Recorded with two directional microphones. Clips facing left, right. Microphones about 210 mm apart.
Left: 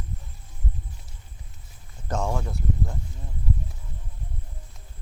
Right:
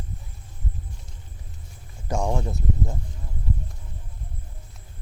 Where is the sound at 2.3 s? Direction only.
20° right (ahead or behind).